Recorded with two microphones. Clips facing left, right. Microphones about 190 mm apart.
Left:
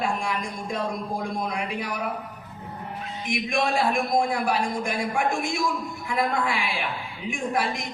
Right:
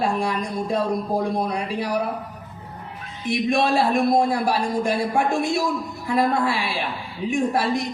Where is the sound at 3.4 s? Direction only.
35° right (ahead or behind).